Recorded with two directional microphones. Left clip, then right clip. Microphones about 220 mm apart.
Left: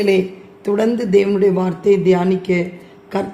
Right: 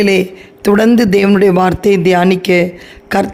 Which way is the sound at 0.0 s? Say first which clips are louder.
Right 4 dB; 45° right (ahead or behind).